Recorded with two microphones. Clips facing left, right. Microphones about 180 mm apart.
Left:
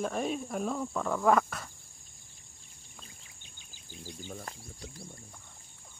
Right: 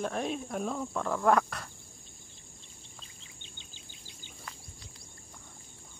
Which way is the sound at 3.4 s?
25° right (ahead or behind).